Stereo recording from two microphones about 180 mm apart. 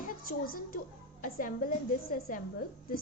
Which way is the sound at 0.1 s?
55° left (ahead or behind).